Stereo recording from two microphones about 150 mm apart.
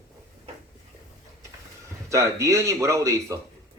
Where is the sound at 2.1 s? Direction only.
20° right (ahead or behind).